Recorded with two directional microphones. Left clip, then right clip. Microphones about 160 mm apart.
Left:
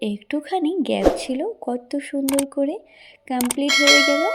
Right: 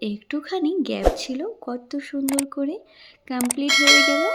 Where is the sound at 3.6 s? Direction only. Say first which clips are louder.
Even; centre (ahead or behind).